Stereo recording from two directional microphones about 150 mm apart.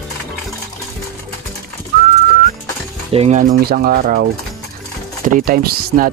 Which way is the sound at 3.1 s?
45° right (ahead or behind).